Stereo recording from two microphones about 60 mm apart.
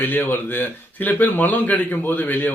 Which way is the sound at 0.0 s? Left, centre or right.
Left.